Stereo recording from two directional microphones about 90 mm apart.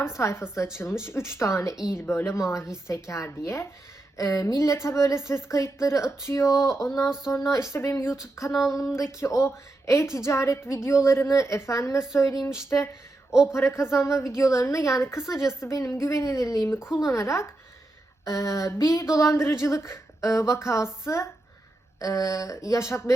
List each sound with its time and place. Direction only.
0.0 s speech: 35° left (ahead or behind)
13.5 s speech: 30° left (ahead or behind)